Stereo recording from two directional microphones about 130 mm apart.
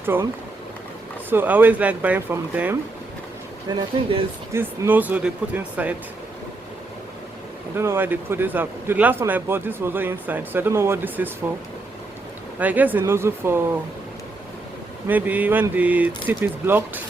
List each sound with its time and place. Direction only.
0.0 s speech: 15° right (ahead or behind)
1.3 s a man's voice: 15° right (ahead or behind)
3.7 s speech: 35° right (ahead or behind)
4.5 s a man's voice: 15° right (ahead or behind)
7.8 s a man's voice: 20° right (ahead or behind)
12.5 s a man's voice: 10° right (ahead or behind)
15.0 s a man's voice: 10° right (ahead or behind)